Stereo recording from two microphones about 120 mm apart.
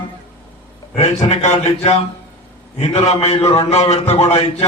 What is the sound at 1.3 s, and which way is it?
A man's voice, 75° left (ahead or behind).